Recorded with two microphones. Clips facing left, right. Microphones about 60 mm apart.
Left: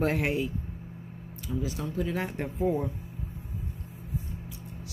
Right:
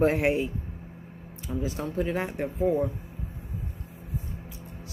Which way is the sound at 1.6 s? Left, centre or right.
Right.